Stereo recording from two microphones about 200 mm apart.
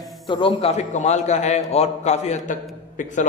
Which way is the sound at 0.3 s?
25° left (ahead or behind).